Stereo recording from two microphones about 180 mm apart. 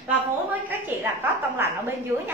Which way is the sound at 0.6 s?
15° right (ahead or behind).